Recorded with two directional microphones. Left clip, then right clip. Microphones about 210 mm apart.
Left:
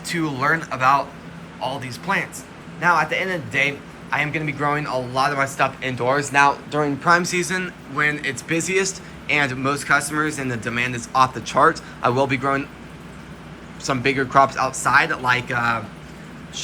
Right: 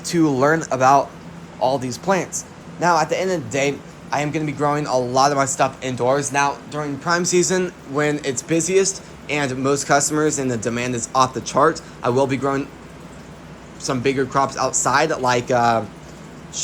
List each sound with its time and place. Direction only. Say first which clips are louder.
0.0 s a man's voice: right 5 dB; 30° right (ahead or behind)
13.8 s speech: even; 15° right (ahead or behind)